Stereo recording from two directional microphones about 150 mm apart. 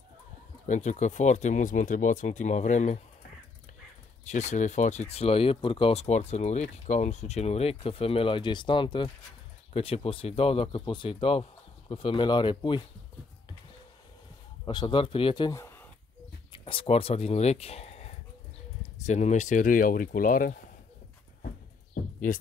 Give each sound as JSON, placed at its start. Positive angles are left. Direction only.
{"t": 0.7, "sound": "speech", "side_deg": 55}
{"t": 4.2, "sound": "speech", "side_deg": 50}
{"t": 14.6, "sound": "speech", "side_deg": 30}